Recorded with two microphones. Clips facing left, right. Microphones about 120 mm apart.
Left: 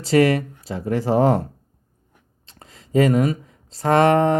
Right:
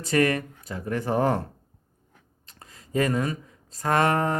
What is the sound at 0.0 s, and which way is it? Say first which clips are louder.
Mantra: left 6 dB; 30° left (ahead or behind).